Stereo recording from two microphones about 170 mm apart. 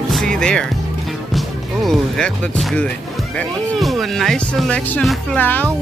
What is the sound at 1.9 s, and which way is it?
Speech, 5° left (ahead or behind).